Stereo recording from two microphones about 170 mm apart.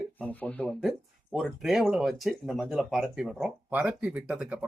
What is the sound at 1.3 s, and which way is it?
Speech, centre (ahead or behind).